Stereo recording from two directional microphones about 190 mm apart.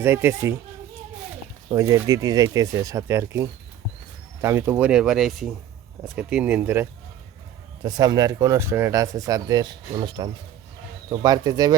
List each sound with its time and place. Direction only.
0.0 s speech: 10° right (ahead or behind)
1.7 s speech: 15° right (ahead or behind)
7.9 s speech: 20° right (ahead or behind)